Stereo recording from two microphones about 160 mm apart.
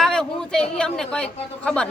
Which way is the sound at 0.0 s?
5° left (ahead or behind).